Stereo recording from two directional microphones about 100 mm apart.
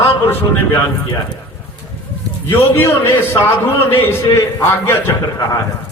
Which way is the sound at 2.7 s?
25° left (ahead or behind).